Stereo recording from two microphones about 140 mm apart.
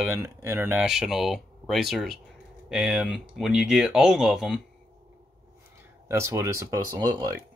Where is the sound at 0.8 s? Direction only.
Centre (ahead or behind).